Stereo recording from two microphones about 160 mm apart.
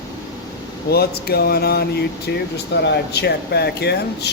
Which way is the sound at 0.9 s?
80° left.